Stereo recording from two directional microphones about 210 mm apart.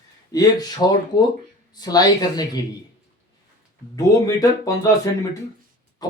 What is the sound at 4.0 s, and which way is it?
Speech, 15° left (ahead or behind).